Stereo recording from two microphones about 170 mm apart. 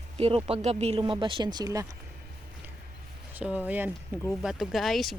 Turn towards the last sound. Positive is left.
turn(degrees=0)  # may be behind; listen again after turning